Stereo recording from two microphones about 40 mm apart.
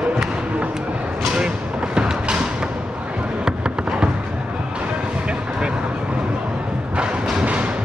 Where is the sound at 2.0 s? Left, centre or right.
Right.